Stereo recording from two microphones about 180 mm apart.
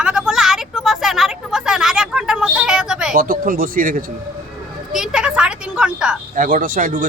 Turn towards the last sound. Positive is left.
turn(degrees=-50)  # may be behind; listen again after turning